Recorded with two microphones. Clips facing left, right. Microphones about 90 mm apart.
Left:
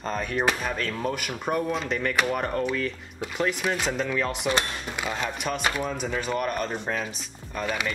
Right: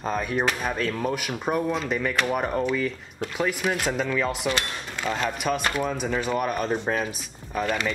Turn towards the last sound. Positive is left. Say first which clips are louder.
# right 3 dB
turn(degrees=5)  # may be behind; listen again after turning